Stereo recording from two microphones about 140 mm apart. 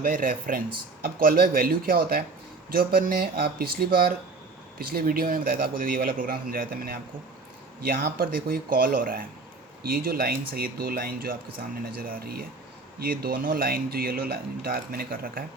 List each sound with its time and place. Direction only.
0.0 s speech: 80° right
1.0 s speech: 90° right